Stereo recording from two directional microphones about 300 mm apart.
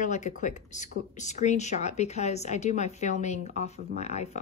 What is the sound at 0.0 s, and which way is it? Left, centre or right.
Speech, left.